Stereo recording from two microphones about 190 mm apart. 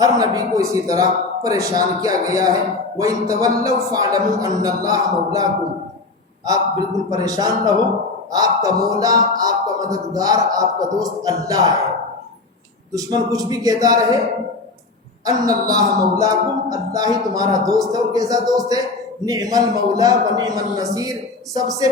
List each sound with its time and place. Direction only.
0.0 s a man's voice: 20° right (ahead or behind)
7.1 s speech: 20° right (ahead or behind)
12.9 s speech: 20° right (ahead or behind)
15.2 s speech: 20° right (ahead or behind)